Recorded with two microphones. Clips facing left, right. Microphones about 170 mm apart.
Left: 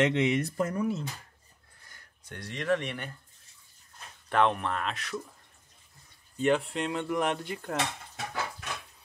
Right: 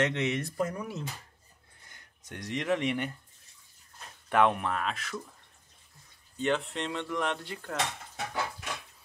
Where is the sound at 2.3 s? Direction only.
15° right (ahead or behind).